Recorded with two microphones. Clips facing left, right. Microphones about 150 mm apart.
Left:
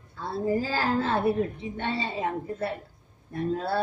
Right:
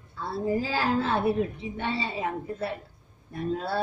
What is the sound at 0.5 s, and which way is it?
A woman's voice, 45° left (ahead or behind).